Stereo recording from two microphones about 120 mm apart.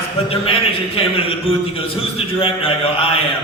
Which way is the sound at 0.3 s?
50° left (ahead or behind).